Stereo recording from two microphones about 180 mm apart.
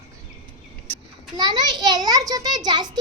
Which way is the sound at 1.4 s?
20° right (ahead or behind).